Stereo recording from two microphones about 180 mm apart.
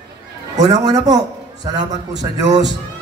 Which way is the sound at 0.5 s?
20° right (ahead or behind).